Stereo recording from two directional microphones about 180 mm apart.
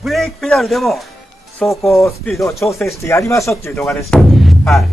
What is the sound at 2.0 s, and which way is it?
Speech, 15° left (ahead or behind).